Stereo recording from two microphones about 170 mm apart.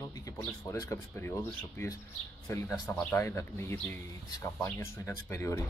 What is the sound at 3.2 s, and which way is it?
Speech, 15° left (ahead or behind).